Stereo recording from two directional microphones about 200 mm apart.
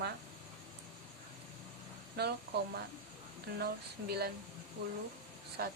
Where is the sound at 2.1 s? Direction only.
55° right (ahead or behind).